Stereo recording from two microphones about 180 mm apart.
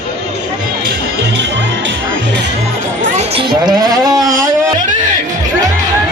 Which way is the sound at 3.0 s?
35° right (ahead or behind).